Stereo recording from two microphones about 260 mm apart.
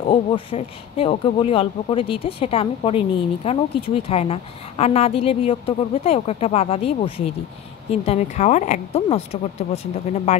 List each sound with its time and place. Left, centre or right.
0.0 s a woman's voice: left